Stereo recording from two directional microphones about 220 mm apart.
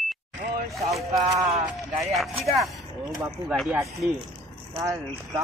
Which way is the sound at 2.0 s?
Centre (ahead or behind).